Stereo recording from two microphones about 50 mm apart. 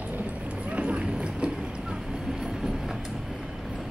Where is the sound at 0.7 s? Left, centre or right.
Right.